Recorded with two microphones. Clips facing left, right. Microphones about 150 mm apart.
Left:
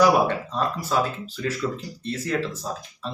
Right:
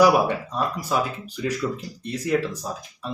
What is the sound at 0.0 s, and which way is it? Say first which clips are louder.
Speech: right 1 dB; 10° right (ahead or behind).